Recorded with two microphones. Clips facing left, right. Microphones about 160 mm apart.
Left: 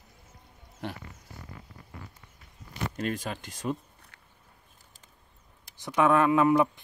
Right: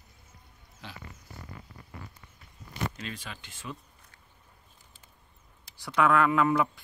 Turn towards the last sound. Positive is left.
turn(degrees=20)  # may be behind; listen again after turning